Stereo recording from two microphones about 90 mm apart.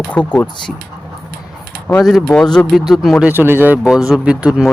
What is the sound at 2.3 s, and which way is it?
Speech, 10° left (ahead or behind).